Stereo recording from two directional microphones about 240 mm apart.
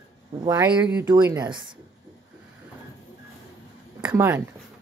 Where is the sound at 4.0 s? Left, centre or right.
Centre.